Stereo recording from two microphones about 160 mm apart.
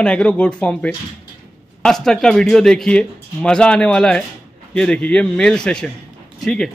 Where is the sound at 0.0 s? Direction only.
5° left (ahead or behind).